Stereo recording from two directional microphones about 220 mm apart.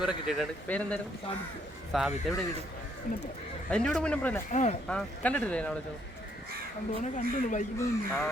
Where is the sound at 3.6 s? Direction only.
5° left (ahead or behind).